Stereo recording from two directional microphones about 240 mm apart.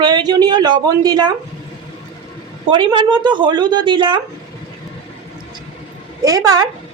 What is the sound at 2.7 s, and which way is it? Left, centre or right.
A woman's voice, centre.